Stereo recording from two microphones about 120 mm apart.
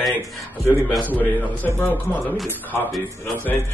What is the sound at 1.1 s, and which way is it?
Speech, 15° left (ahead or behind).